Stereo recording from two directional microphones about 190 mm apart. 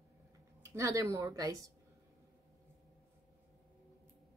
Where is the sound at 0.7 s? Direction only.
15° right (ahead or behind).